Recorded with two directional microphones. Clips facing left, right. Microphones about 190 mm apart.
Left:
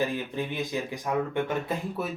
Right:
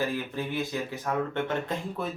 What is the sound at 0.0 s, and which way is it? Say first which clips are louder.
Speech: left 1 dB; 15° left (ahead or behind).